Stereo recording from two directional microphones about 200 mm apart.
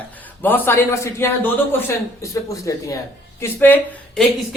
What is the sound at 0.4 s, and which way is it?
Speech, 10° left (ahead or behind).